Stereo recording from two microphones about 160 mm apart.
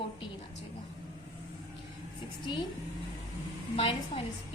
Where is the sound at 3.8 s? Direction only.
35° left (ahead or behind).